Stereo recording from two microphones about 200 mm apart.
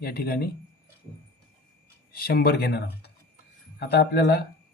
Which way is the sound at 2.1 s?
50° left (ahead or behind).